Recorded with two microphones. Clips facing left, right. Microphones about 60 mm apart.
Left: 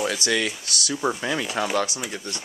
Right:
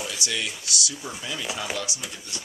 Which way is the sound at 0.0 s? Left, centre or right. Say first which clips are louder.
Left 7 dB; left.